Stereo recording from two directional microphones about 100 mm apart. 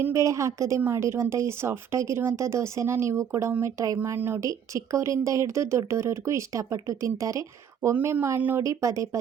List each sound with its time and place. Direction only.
0.0 s speech: 30° right (ahead or behind)
8.6 s speech: 30° right (ahead or behind)